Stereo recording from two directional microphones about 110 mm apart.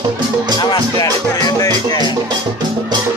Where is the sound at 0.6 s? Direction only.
40° left (ahead or behind).